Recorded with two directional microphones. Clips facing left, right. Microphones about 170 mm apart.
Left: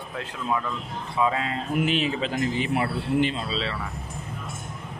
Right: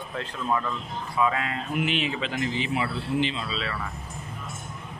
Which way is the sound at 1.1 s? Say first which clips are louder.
Left 1 dB; 25° left (ahead or behind).